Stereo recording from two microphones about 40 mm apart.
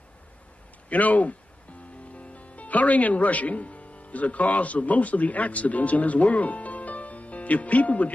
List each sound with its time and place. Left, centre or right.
0.8 s a man's voice: left